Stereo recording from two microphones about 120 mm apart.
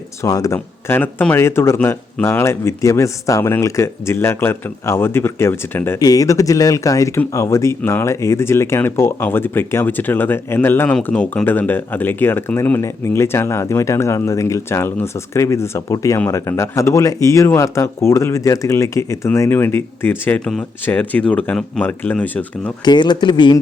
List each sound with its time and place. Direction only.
0.2 s speech: 30° left (ahead or behind)
6.0 s speech: 30° left (ahead or behind); by 22.7 s 10° left (ahead or behind)
22.8 s speech: 40° left (ahead or behind)